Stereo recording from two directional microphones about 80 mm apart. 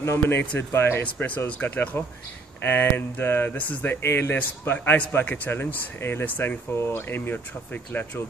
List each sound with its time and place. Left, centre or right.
0.0 s speech: left
1.0 s speech: centre